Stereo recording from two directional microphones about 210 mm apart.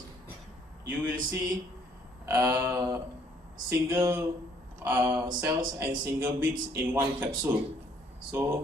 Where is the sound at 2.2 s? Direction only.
10° right (ahead or behind).